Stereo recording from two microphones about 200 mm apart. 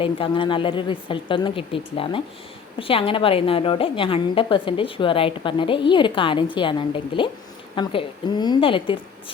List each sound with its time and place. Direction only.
0.0 s a woman's voice: 25° left (ahead or behind)